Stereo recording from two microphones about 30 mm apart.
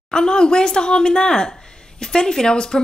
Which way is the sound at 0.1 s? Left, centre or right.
Left.